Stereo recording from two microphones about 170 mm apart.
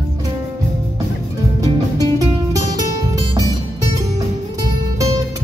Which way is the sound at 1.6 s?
20° right (ahead or behind).